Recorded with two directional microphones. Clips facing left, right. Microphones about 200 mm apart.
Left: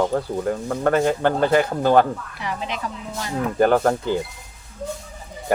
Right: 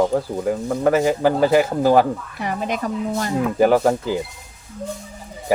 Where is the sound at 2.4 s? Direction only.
50° right (ahead or behind).